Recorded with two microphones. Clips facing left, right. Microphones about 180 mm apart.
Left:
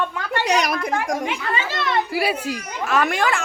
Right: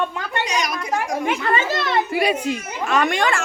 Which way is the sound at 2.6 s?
Centre (ahead or behind).